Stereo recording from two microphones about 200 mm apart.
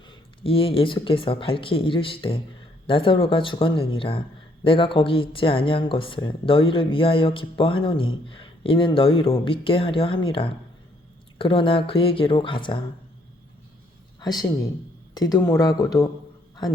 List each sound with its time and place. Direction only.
0.1 s speech: 25° left (ahead or behind)
14.2 s speech: 20° left (ahead or behind)